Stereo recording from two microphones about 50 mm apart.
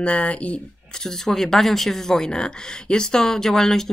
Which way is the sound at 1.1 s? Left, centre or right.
Centre.